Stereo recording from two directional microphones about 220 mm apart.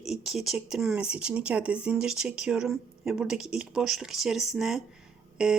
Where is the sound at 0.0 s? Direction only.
Centre (ahead or behind).